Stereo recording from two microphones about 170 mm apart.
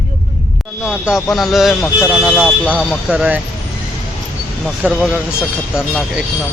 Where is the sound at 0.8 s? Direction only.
5° right (ahead or behind).